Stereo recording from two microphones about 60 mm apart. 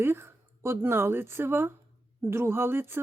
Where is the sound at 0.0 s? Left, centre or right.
Right.